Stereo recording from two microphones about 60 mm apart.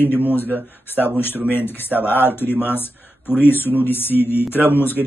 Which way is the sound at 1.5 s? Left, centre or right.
Left.